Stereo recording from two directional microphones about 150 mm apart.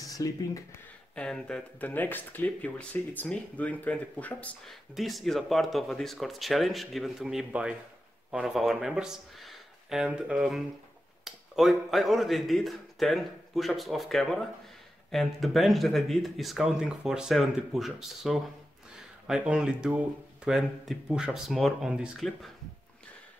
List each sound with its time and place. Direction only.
0.1 s speech: 25° left (ahead or behind)
1.1 s speech: 5° left (ahead or behind)